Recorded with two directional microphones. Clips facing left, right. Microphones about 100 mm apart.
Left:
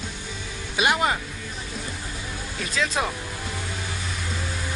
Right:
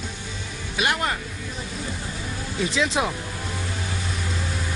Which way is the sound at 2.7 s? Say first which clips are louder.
Right 1 dB; 20° right (ahead or behind).